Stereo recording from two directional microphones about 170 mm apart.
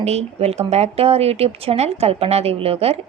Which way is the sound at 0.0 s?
40° right (ahead or behind).